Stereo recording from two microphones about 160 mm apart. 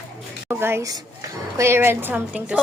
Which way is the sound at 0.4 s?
20° right (ahead or behind).